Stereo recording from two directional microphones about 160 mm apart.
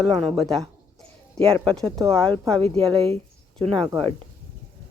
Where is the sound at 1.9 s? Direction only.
20° right (ahead or behind).